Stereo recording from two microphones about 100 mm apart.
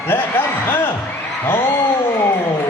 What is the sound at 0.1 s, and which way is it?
Speech, 20° left (ahead or behind).